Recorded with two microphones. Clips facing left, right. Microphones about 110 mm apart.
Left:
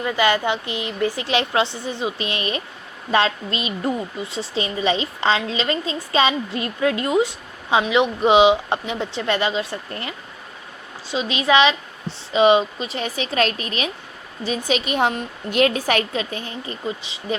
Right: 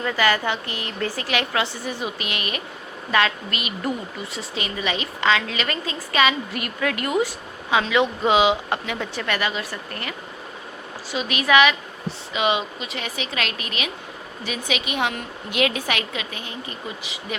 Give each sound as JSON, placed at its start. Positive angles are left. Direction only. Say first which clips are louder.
{"t": 0.0, "sound": "a woman's voice", "louder": "left 2 dB", "side_deg": 20}